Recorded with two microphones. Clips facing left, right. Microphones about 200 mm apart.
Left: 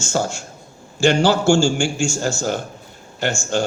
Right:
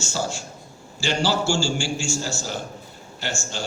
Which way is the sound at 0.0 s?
50° left (ahead or behind).